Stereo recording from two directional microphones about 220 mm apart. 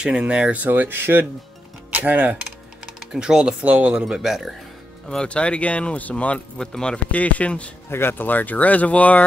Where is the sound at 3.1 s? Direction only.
5° right (ahead or behind).